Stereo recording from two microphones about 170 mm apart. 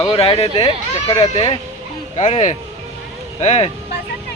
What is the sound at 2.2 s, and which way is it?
Speech, 45° left (ahead or behind).